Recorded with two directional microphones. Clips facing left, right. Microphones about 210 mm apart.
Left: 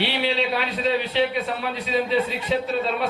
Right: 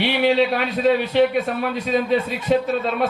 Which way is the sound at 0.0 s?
50° right (ahead or behind).